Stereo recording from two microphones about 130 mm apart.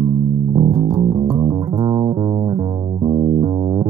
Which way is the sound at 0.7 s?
60° right (ahead or behind).